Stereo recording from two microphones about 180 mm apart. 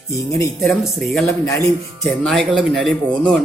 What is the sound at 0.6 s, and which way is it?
Speech, 5° left (ahead or behind).